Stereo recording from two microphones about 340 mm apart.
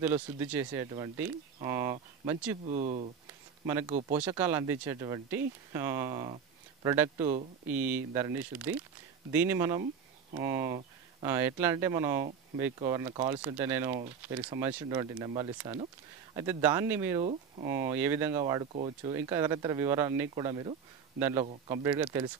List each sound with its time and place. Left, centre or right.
0.0 s speech: centre
2.7 s speech: centre
3.6 s speech: centre
17.2 s speech: centre
17.6 s speech: centre